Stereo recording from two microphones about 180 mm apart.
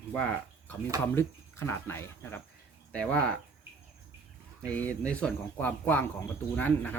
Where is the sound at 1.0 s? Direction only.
10° left (ahead or behind).